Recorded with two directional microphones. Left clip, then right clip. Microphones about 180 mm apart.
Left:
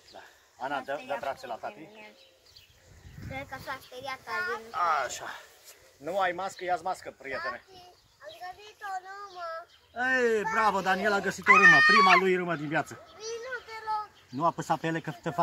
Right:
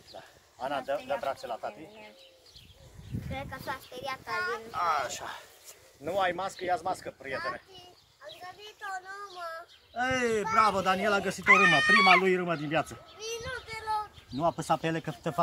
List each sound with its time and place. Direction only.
0.1 s a sound: 25° right (ahead or behind)
1.2 s speech: 15° right (ahead or behind)
1.7 s speech: centre (ahead or behind)
3.3 s speech: 5° right (ahead or behind)
4.3 s speech: 50° right (ahead or behind)
4.7 s speech: 15° left (ahead or behind)
6.0 s speech: centre (ahead or behind)
8.9 s child singing: 50° right (ahead or behind)
9.9 s speech: 20° right (ahead or behind)
11.5 s speech: 5° right (ahead or behind)
12.4 s speech: 20° right (ahead or behind)
13.2 s a sound: 50° right (ahead or behind)
14.3 s speech: 20° right (ahead or behind)